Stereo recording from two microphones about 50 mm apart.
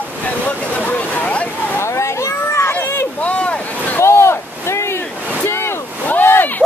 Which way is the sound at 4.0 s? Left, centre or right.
Left.